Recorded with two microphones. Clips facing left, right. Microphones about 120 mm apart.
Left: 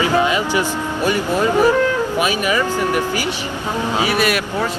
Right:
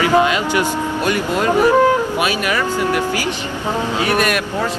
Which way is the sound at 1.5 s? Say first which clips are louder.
Right 4 dB; 15° right (ahead or behind).